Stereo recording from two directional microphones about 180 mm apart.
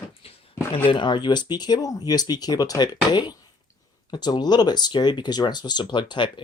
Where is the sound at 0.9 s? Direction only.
25° left (ahead or behind).